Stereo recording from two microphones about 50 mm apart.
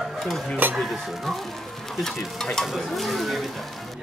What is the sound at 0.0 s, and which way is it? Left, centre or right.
Dishes, centre.